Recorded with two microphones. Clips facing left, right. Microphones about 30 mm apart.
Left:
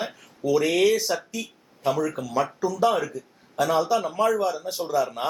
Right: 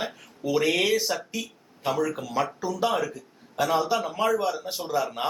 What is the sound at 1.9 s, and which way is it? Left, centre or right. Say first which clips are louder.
Speech: left 2 dB; centre.